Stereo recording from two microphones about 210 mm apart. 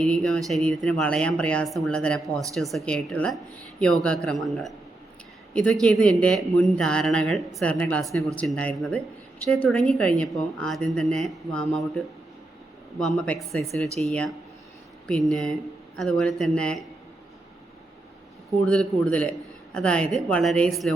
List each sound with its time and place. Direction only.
0.0 s speech: centre (ahead or behind)
2.2 s speech: 15° right (ahead or behind)
2.6 s speech: centre (ahead or behind)
18.6 s speech: 5° left (ahead or behind)